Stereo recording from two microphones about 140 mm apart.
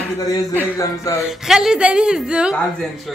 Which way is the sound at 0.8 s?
20° left (ahead or behind).